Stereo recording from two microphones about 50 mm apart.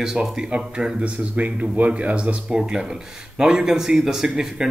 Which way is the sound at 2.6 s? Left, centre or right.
Centre.